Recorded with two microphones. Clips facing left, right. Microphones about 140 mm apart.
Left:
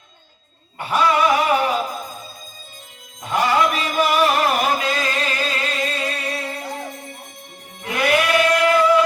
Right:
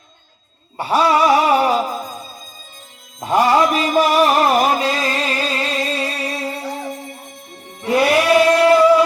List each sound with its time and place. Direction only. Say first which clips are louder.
0.8 s a sound: right 3 dB; 35° right (ahead or behind)
3.2 s music: right 4 dB; 40° right (ahead or behind)
7.9 s choir: right 5 dB; 35° right (ahead or behind)